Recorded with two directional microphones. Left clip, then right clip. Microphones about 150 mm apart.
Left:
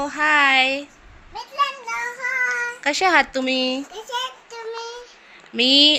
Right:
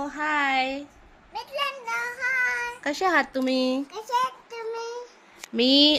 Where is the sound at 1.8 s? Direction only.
35° right (ahead or behind).